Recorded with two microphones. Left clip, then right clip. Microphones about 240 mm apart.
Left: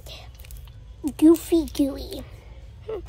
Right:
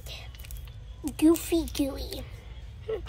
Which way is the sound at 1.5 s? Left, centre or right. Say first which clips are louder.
Left 6 dB; left.